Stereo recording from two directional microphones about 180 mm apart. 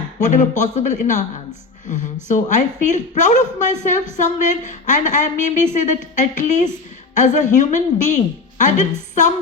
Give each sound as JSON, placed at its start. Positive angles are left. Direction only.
{"t": 0.2, "sound": "a woman's voice", "side_deg": 45}
{"t": 2.2, "sound": "a woman's voice", "side_deg": 45}